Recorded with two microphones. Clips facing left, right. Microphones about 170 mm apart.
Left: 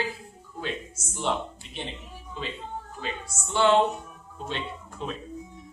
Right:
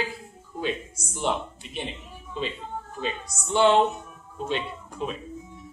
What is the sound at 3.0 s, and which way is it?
Speech, 20° right (ahead or behind).